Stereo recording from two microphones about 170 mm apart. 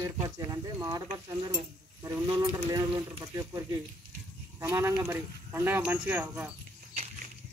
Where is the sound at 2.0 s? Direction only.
20° right (ahead or behind).